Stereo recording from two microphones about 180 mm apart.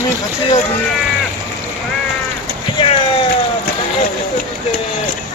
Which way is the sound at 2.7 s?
30° left (ahead or behind).